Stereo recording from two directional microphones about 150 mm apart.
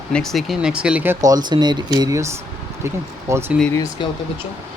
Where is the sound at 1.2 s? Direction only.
25° right (ahead or behind).